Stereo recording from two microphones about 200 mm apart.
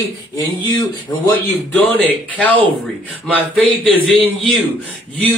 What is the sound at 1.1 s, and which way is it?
Speech, 10° left (ahead or behind).